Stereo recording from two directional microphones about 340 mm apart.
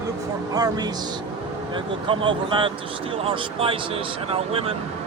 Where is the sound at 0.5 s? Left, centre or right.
Centre.